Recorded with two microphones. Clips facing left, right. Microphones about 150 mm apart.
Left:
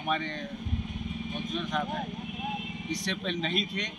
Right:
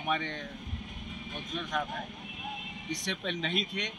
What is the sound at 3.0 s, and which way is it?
Speech, 15° right (ahead or behind).